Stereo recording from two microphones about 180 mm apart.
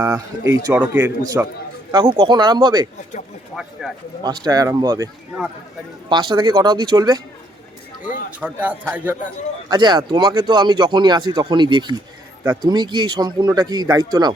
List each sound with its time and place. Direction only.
0.0 s speech: 15° right (ahead or behind)
1.9 s speech: 25° right (ahead or behind)
3.5 s speech: centre (ahead or behind)
4.2 s speech: 20° right (ahead or behind)
6.1 s speech: 25° right (ahead or behind)
8.4 s speech: 10° right (ahead or behind)
9.6 s speech: 25° right (ahead or behind)